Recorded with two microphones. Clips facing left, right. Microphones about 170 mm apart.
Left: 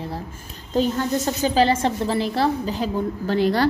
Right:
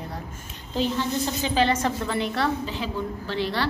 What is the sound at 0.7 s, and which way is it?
A woman's voice, 45° left (ahead or behind).